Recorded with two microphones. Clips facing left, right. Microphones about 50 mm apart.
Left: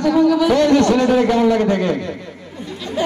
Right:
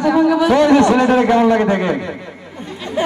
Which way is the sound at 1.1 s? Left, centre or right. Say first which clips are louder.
Right 2 dB; right.